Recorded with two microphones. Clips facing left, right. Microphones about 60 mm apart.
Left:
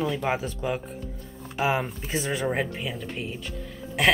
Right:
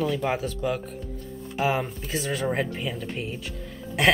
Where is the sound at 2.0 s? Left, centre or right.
Centre.